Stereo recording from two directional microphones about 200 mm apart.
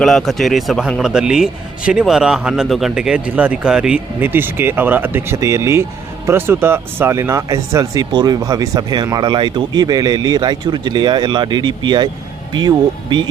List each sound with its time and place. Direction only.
0.0 s speech: centre (ahead or behind); by 13.2 s 25° right (ahead or behind)